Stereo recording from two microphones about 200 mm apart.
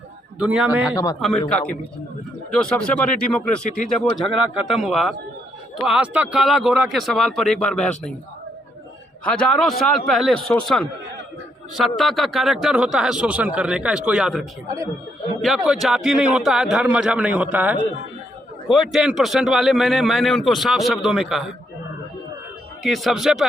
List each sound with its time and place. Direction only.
0.3 s a man's voice: 5° right (ahead or behind)
0.9 s speech: 20° left (ahead or behind)
1.2 s a man's voice: 5° left (ahead or behind)
9.2 s a man's voice: 5° left (ahead or behind)
22.8 s a man's voice: centre (ahead or behind)